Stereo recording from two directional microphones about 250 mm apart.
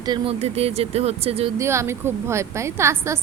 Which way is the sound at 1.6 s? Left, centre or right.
Centre.